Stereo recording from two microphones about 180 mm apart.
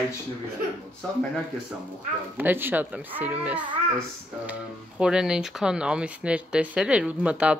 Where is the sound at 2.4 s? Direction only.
10° right (ahead or behind).